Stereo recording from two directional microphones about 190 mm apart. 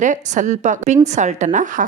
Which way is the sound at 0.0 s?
40° right (ahead or behind).